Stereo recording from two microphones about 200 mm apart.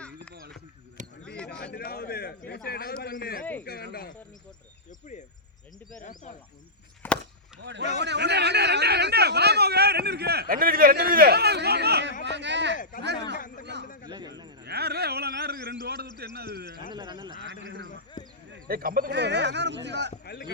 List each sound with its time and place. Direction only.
1.0 s a sound: 40° right (ahead or behind)
1.7 s a man's voice: 50° left (ahead or behind)
4.9 s speech: 40° left (ahead or behind)
7.0 s chop: 10° left (ahead or behind)
7.6 s a man's voice: 60° right (ahead or behind)
13.8 s a man's voice: 40° left (ahead or behind)
14.1 s a man's voice: 20° right (ahead or behind)
14.6 s a man's voice: 55° right (ahead or behind)
16.9 s a man's voice: 20° right (ahead or behind)
17.4 s speech: 65° right (ahead or behind)
18.2 s a sound: 40° left (ahead or behind)
18.7 s speech: 45° right (ahead or behind)
20.2 s speech: 50° left (ahead or behind)